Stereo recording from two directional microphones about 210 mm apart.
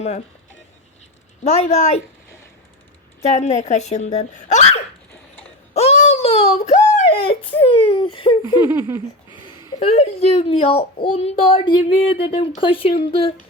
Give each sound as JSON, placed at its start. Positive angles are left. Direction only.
{"t": 1.5, "sound": "speech", "side_deg": 30}
{"t": 3.2, "sound": "speech", "side_deg": 30}
{"t": 5.7, "sound": "a sound", "side_deg": 30}
{"t": 7.9, "sound": "a child's voice", "side_deg": 25}
{"t": 8.7, "sound": "a sound", "side_deg": -10}
{"t": 9.6, "sound": "a child's voice", "side_deg": 30}